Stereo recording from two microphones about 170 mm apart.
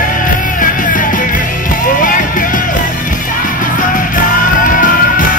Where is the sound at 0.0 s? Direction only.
55° left (ahead or behind).